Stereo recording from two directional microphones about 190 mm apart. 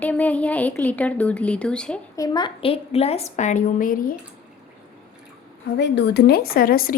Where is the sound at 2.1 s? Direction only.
20° left (ahead or behind); by 4.1 s 45° left (ahead or behind).